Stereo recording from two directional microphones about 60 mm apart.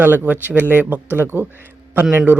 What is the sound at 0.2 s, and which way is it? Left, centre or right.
Speech, right.